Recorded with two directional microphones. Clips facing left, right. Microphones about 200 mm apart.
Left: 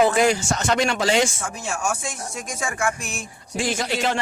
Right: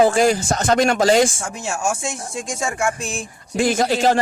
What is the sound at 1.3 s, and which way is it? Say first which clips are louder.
Speech: right 2 dB; 25° right (ahead or behind).